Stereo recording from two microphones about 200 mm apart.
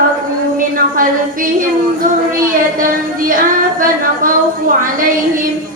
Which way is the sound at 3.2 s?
45° right (ahead or behind).